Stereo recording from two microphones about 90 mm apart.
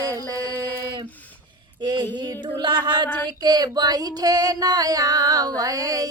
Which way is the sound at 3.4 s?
50° right (ahead or behind).